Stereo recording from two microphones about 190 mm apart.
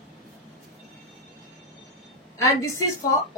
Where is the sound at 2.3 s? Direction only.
15° left (ahead or behind).